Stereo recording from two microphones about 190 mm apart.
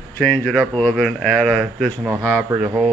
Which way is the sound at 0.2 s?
5° left (ahead or behind).